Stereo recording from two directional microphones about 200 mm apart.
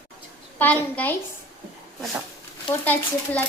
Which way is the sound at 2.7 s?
10° left (ahead or behind).